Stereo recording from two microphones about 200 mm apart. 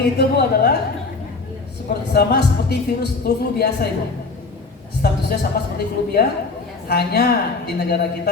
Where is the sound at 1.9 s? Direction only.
55° left (ahead or behind).